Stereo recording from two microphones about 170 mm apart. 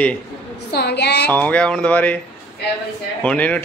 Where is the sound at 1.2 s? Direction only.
10° left (ahead or behind).